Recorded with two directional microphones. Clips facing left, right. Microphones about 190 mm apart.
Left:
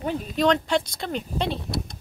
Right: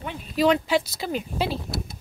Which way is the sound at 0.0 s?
40° left (ahead or behind).